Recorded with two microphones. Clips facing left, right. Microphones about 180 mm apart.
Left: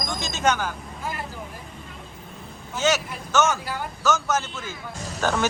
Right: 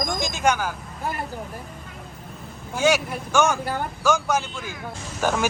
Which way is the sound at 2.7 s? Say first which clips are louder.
Right 3 dB; 10° right (ahead or behind).